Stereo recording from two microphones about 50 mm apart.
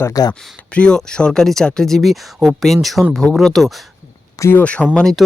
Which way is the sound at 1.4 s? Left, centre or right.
Centre.